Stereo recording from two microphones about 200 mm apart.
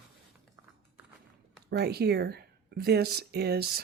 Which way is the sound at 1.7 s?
55° right (ahead or behind).